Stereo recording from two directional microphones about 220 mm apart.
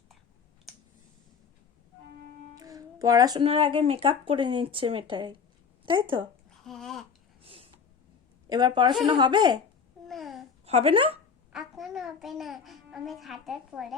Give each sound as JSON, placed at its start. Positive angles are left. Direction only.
{"t": 2.6, "sound": "speech", "side_deg": -15}
{"t": 6.7, "sound": "babbling", "side_deg": 0}
{"t": 7.4, "sound": "a sound", "side_deg": -25}
{"t": 8.4, "sound": "speech", "side_deg": -20}
{"t": 10.1, "sound": "babbling", "side_deg": 0}
{"t": 10.7, "sound": "speech", "side_deg": -25}
{"t": 11.5, "sound": "a child's voice", "side_deg": 0}